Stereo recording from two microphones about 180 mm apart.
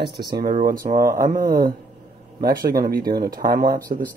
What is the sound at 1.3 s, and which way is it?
Speech, 50° right (ahead or behind).